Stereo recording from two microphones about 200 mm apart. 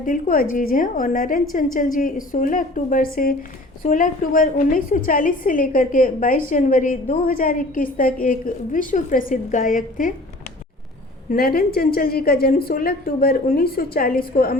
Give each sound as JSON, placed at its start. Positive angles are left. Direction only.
{"t": 0.0, "sound": "a woman's voice", "side_deg": 45}
{"t": 11.3, "sound": "a woman's voice", "side_deg": 45}